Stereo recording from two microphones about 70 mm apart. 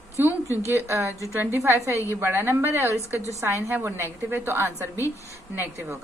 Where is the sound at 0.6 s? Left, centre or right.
Right.